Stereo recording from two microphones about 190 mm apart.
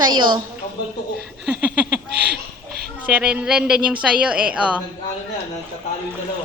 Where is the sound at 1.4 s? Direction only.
5° right (ahead or behind).